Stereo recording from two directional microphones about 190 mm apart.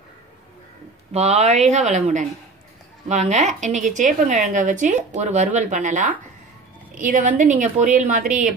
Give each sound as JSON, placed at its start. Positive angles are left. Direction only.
{"t": 1.1, "sound": "a woman's voice", "side_deg": -35}